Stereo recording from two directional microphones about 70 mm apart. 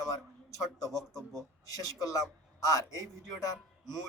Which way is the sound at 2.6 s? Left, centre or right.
Left.